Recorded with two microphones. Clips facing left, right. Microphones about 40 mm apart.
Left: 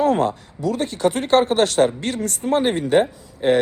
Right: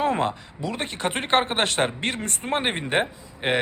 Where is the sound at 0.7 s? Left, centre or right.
Right.